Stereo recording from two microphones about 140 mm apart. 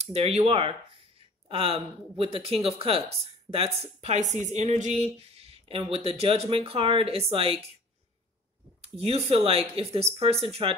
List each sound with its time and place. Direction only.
0.0 s speech: 50° right (ahead or behind)
4.0 s speech: 55° right (ahead or behind)
8.8 s speech: 45° right (ahead or behind)